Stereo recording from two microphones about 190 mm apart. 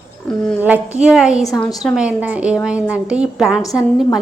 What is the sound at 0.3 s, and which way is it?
A woman's voice, centre (ahead or behind).